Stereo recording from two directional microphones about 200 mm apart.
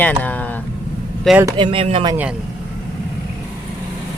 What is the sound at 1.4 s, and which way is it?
Speech, 25° right (ahead or behind).